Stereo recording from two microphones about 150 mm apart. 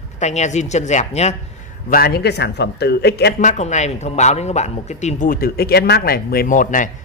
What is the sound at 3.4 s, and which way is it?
Speech, 50° left (ahead or behind).